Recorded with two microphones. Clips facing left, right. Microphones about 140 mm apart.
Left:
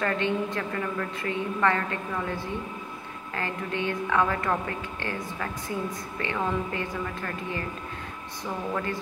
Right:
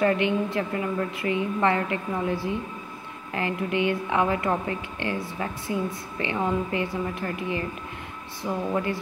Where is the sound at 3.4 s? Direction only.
15° right (ahead or behind).